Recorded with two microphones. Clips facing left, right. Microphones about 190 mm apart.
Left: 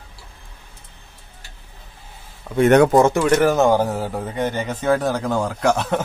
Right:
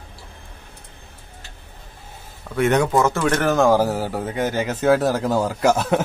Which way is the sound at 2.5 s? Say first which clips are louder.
Left 5 dB; 10° left (ahead or behind).